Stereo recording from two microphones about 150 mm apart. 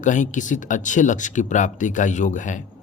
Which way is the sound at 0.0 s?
55° left (ahead or behind).